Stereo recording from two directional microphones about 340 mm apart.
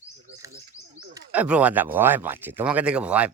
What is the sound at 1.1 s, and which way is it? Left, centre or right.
Speech, centre.